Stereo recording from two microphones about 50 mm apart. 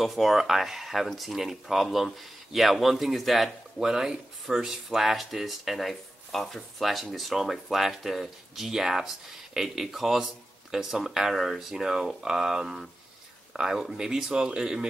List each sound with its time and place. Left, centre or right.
0.0 s speech: centre
3.8 s speech: centre